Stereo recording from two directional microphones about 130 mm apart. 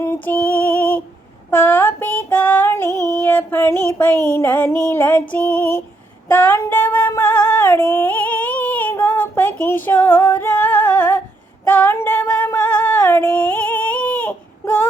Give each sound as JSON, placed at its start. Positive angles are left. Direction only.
{"t": 0.0, "sound": "female singing", "side_deg": 15}
{"t": 3.3, "sound": "music", "side_deg": 15}
{"t": 6.3, "sound": "female singing", "side_deg": 15}
{"t": 12.5, "sound": "a sound", "side_deg": 15}